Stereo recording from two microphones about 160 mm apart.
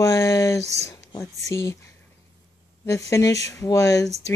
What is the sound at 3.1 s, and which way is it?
Speech, 20° left (ahead or behind).